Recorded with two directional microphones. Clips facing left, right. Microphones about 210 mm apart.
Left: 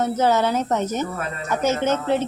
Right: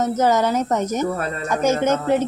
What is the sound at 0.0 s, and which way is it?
Speech, 10° right (ahead or behind).